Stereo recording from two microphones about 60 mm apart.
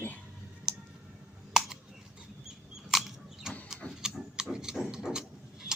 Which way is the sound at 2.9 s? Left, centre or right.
Centre.